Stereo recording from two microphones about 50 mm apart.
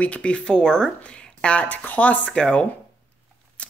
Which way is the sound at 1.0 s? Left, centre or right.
Left.